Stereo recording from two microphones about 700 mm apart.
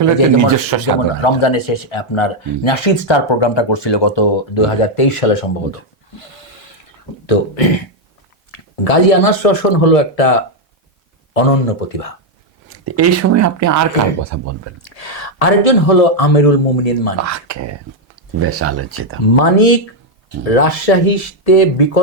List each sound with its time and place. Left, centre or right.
0.0 s speech: right
1.2 s speech: left
6.1 s a sound: left
7.3 s a man's voice: left
12.6 s speech: centre
14.8 s a man's voice: left
18.3 s speech: centre
19.3 s a man's voice: left